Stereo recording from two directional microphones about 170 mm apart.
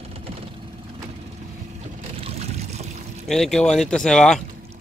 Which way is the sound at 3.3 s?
Centre (ahead or behind).